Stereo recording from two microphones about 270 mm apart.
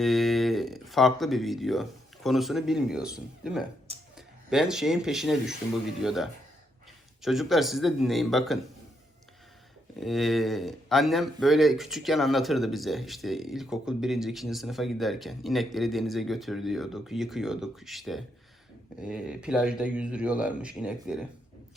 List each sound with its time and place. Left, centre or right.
0.0 s speech: centre
3.9 s a sound: right
4.4 s speech: centre
10.0 s speech: centre